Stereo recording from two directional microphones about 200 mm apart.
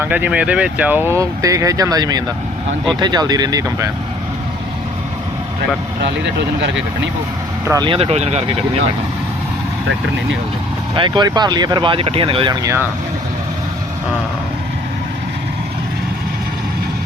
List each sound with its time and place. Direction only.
0.0 s speech: 10° right (ahead or behind)
7.7 s speech: 20° right (ahead or behind)
10.9 s speech: 25° right (ahead or behind)